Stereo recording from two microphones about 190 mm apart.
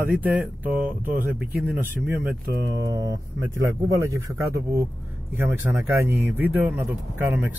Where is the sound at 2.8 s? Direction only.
20° right (ahead or behind).